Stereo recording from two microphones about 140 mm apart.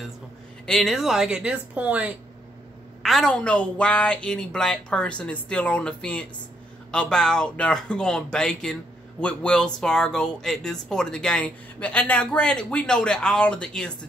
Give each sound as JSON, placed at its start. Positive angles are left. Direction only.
{"t": 0.7, "sound": "speech", "side_deg": 0}
{"t": 3.0, "sound": "a woman's voice", "side_deg": 0}